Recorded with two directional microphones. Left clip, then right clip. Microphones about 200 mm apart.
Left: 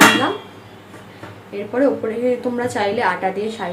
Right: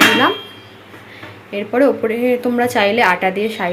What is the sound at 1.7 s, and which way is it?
A woman's voice, 30° right (ahead or behind).